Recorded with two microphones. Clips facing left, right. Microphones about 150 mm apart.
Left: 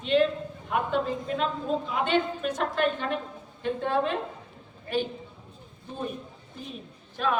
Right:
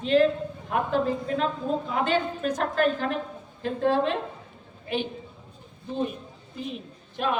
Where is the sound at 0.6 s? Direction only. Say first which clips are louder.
Right 2 dB; 35° right (ahead or behind).